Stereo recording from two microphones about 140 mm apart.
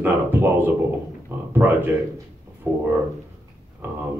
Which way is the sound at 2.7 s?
15° right (ahead or behind).